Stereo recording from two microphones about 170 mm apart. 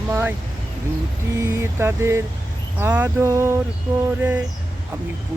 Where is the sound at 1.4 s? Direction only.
15° right (ahead or behind).